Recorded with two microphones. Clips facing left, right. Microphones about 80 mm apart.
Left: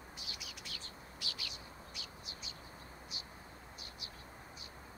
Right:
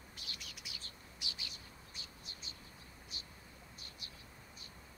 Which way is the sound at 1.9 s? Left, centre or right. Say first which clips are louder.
Left 4 dB; right.